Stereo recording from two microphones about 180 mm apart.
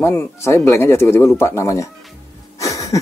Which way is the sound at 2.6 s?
20° left (ahead or behind).